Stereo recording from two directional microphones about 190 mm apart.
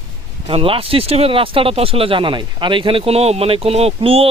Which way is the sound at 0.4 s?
30° right (ahead or behind).